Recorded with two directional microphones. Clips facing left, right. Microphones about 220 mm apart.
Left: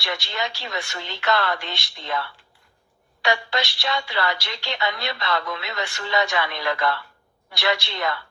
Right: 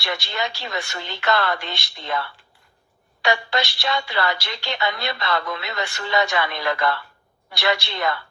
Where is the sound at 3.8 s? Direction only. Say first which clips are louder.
Right 1 dB; 55° right (ahead or behind).